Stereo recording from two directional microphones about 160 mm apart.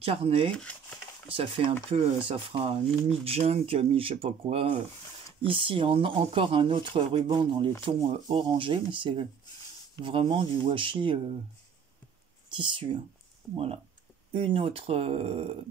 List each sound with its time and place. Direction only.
0.0 s speech: 35° right (ahead or behind)
0.5 s a sound: 10° left (ahead or behind)
1.3 s speech: 35° right (ahead or behind)
12.5 s speech: 30° right (ahead or behind)
13.4 s speech: centre (ahead or behind)
14.3 s speech: 35° right (ahead or behind)